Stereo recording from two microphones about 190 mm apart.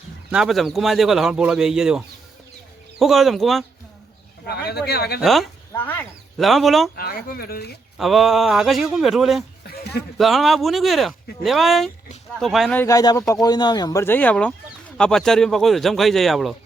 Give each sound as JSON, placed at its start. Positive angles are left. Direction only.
{"t": 0.3, "sound": "speech", "side_deg": -5}
{"t": 4.4, "sound": "speech", "side_deg": 55}
{"t": 5.2, "sound": "speech", "side_deg": 0}
{"t": 6.9, "sound": "speech", "side_deg": 50}
{"t": 7.9, "sound": "speech", "side_deg": 0}
{"t": 12.7, "sound": "speech", "side_deg": 15}